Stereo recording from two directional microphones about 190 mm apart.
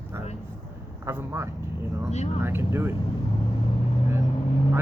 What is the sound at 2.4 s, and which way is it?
Speech, 10° right (ahead or behind).